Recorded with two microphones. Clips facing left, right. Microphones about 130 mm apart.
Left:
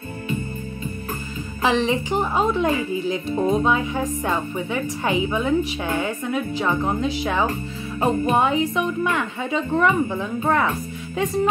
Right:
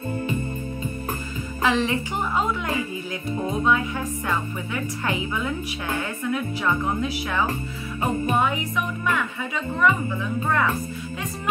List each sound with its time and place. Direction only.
1.6 s speech: 20° left (ahead or behind)